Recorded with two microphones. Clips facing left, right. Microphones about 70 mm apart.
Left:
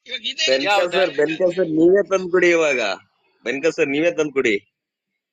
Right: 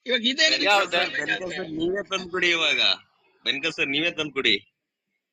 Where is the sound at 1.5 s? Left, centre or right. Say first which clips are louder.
Left 12 dB; right.